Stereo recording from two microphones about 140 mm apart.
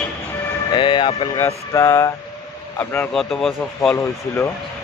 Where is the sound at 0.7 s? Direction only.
35° left (ahead or behind).